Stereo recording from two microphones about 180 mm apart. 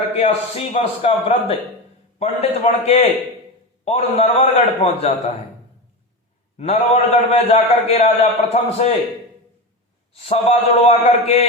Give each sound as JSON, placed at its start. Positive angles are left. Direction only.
{"t": 0.2, "sound": "a man's voice", "side_deg": 35}
{"t": 6.6, "sound": "a man's voice", "side_deg": 35}
{"t": 10.2, "sound": "a man's voice", "side_deg": 35}